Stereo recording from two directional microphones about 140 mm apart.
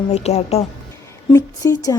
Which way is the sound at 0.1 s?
50° left (ahead or behind).